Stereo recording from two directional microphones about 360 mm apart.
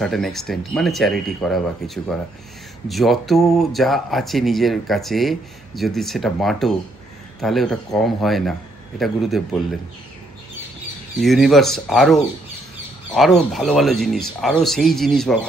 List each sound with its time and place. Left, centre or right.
0.0 s speech: centre
11.1 s speech: centre